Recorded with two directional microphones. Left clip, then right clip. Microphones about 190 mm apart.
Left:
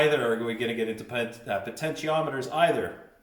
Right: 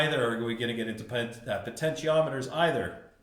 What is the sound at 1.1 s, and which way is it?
Speech, 20° right (ahead or behind).